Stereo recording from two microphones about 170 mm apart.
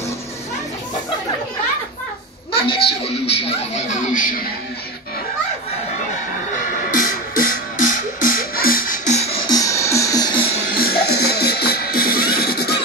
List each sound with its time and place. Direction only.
2.6 s a sound: 35° left (ahead or behind); by 4.5 s 50° left (ahead or behind)
6.5 s music: 50° left (ahead or behind)
9.5 s music: 20° left (ahead or behind)
10.7 s music: 65° left (ahead or behind)